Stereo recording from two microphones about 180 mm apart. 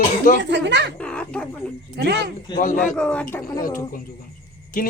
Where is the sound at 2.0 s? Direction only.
65° right (ahead or behind).